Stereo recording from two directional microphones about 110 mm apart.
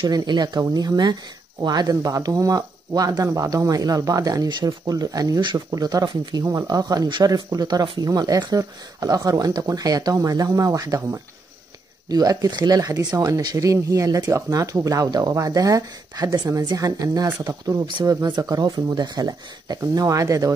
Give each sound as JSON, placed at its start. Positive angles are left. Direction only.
{"t": 0.0, "sound": "speech", "side_deg": -40}